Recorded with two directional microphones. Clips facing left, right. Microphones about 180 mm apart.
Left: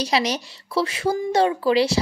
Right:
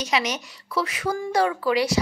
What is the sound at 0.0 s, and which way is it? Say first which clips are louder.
A woman's voice: left 3 dB; 35° left (ahead or behind).